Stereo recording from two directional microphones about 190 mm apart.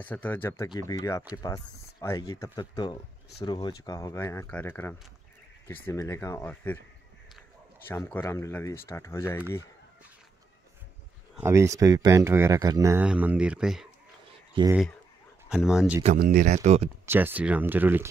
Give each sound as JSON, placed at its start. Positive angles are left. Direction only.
{"t": 0.0, "sound": "speech", "side_deg": 10}
{"t": 7.9, "sound": "speech", "side_deg": 10}
{"t": 11.3, "sound": "speech", "side_deg": -15}
{"t": 14.6, "sound": "speech", "side_deg": -25}
{"t": 15.5, "sound": "speech", "side_deg": -5}
{"t": 16.2, "sound": "speech", "side_deg": -50}
{"t": 17.0, "sound": "speech", "side_deg": -10}